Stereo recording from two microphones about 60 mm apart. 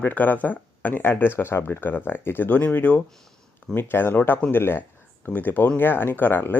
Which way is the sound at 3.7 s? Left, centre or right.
Left.